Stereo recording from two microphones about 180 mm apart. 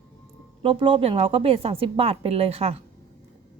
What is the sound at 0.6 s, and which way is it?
A woman's voice, 30° right (ahead or behind).